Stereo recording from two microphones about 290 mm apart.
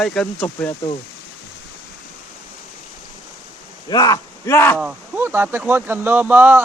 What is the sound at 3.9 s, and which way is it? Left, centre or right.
Speech, centre.